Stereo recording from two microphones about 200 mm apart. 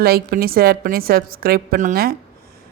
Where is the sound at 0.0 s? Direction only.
50° right (ahead or behind).